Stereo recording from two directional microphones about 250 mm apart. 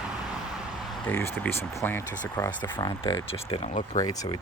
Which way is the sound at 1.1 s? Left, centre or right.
Centre.